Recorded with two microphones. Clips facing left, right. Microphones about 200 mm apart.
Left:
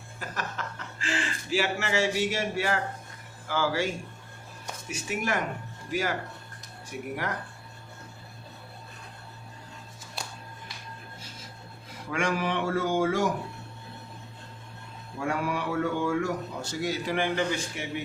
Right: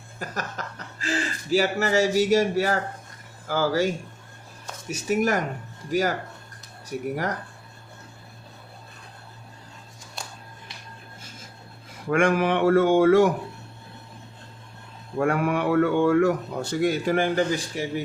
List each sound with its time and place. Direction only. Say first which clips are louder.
0.2 s speech: right 3 dB; 40° right (ahead or behind)
12.1 s a man's voice: right 7 dB; 55° right (ahead or behind)
15.2 s a man's voice: right 7 dB; 55° right (ahead or behind); by 18.0 s 35° right (ahead or behind)